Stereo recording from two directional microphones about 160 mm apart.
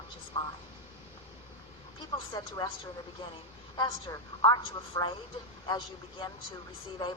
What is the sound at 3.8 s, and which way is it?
A woman's voice, 25° left (ahead or behind).